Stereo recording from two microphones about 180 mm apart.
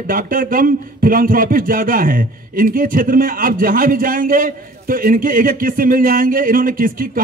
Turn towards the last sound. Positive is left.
turn(degrees=-50)  # may be behind; listen again after turning